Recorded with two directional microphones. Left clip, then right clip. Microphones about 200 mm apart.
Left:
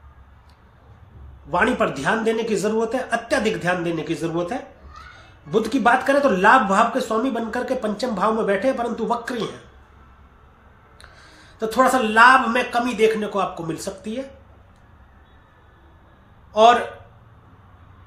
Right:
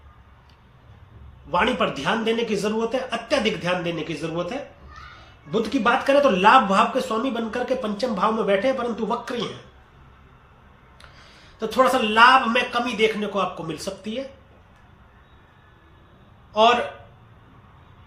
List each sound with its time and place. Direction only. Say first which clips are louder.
1.5 s speech: left 2 dB; 15° left (ahead or behind)
11.7 s speech: left 1 dB; 20° left (ahead or behind)
16.5 s a man's voice: left 4 dB; 20° left (ahead or behind)